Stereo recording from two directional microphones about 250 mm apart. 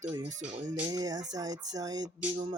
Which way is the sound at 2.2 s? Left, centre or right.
Right.